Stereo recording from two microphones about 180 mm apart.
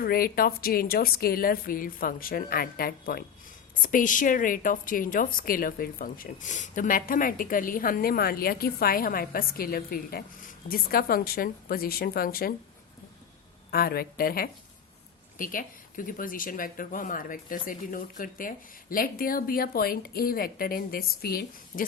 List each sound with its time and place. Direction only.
0.0 s a woman's voice: 55° left (ahead or behind)
13.7 s a woman's voice: 55° left (ahead or behind)